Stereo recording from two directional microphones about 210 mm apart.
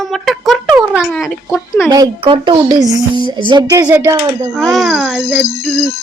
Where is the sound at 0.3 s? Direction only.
Centre (ahead or behind).